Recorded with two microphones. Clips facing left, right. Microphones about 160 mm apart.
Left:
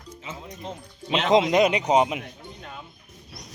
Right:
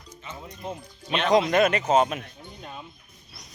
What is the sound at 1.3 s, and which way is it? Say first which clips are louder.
Speech: left 1 dB; 20° left (ahead or behind).